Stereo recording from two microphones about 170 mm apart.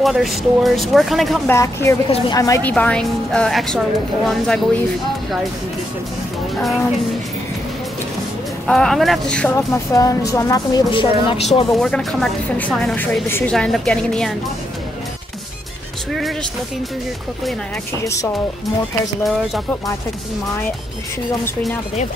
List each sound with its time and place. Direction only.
0.0 s a woman's voice: centre (ahead or behind)
1.5 s speech: 15° left (ahead or behind)
2.0 s a woman's voice: 35° left (ahead or behind)
2.3 s a woman's voice: 20° left (ahead or behind)
2.6 s a woman's voice: 5° left (ahead or behind)
8.6 s a woman's voice: 5° left (ahead or behind)
9.6 s a woman's voice: 20° left (ahead or behind); by 11.6 s 35° left (ahead or behind)
11.7 s a woman's voice: centre (ahead or behind)
16.1 s music: centre (ahead or behind)
18.0 s speech: 20° left (ahead or behind)